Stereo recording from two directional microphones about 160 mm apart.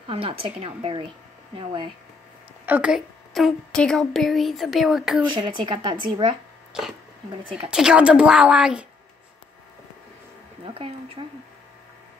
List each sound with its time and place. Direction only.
0.1 s speech: 35° right (ahead or behind)
2.6 s a woman's voice: 10° right (ahead or behind)
5.3 s speech: 30° right (ahead or behind)
6.7 s a woman's voice: 5° right (ahead or behind)
10.6 s speech: 35° right (ahead or behind)